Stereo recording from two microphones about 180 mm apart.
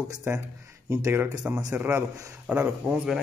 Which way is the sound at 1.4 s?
10° right (ahead or behind).